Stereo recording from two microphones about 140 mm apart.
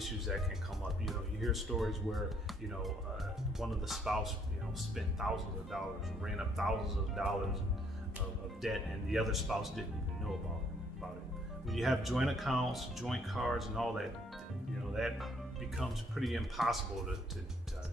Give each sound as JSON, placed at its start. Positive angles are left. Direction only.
{"t": 1.0, "sound": "speech", "side_deg": 0}
{"t": 3.5, "sound": "speech", "side_deg": 0}
{"t": 8.6, "sound": "speech", "side_deg": 0}
{"t": 11.7, "sound": "speech", "side_deg": 0}